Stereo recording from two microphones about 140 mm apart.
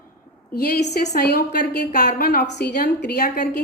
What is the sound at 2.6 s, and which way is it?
Speech, 90° left.